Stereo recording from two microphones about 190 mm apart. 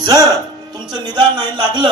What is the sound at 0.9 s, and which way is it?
Speech, 20° right (ahead or behind).